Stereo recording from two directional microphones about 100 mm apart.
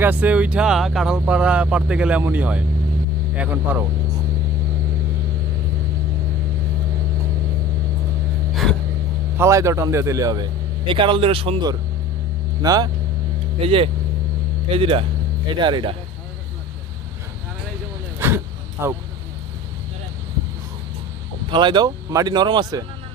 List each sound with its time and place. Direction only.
0.0 s speech: 15° right (ahead or behind)
8.6 s a sound: centre (ahead or behind)
9.4 s a man's voice: 30° right (ahead or behind)
10.8 s speech: 55° right (ahead or behind)
12.6 s a man's voice: 40° right (ahead or behind)
13.6 s speech: 70° right (ahead or behind)
15.4 s speech: 50° right (ahead or behind)
18.2 s a sound: 25° right (ahead or behind)
21.5 s speech: 50° right (ahead or behind)